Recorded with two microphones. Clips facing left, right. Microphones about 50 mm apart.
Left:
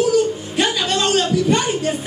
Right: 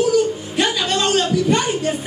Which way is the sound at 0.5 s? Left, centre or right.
Centre.